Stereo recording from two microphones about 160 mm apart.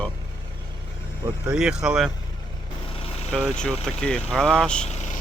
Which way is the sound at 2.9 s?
35° left (ahead or behind).